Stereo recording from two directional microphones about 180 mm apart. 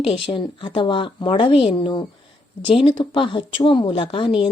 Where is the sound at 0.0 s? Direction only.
30° left (ahead or behind).